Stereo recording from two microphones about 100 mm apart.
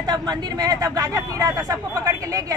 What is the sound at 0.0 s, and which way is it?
Speech, 45° right (ahead or behind).